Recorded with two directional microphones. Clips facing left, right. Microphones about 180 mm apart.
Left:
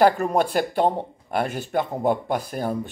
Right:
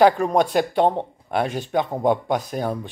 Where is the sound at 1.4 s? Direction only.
10° left (ahead or behind).